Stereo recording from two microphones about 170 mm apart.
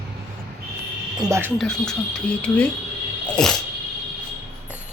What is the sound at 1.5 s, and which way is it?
Speech, 5° left (ahead or behind).